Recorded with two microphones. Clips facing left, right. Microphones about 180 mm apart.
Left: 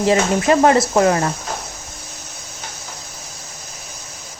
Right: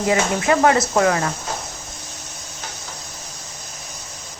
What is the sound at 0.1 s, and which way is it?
A woman's voice, 25° left (ahead or behind).